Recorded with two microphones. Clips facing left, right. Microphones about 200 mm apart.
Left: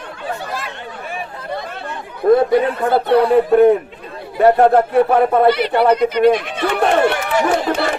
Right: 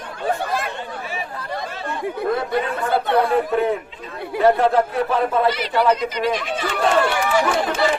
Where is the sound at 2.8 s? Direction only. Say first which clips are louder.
Left 5 dB; 55° left (ahead or behind).